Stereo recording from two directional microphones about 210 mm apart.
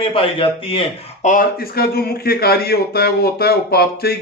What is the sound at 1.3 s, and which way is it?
Speech, 45° left (ahead or behind).